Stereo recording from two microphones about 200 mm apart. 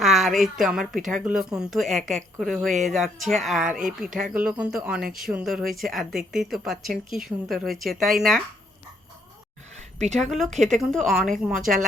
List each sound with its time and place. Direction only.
0.0 s speech: centre (ahead or behind)
9.7 s a sound: 35° right (ahead or behind)
10.2 s speech: centre (ahead or behind)
10.5 s a woman's voice: 35° right (ahead or behind)
10.8 s speech: centre (ahead or behind)